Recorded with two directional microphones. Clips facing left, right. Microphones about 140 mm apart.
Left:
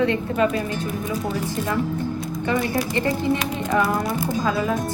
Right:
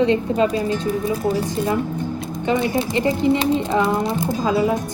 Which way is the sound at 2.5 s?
20° right (ahead or behind).